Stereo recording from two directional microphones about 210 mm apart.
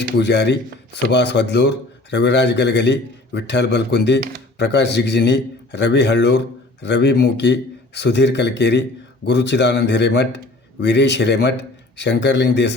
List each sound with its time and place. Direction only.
0.2 s a man's voice: 55° left (ahead or behind)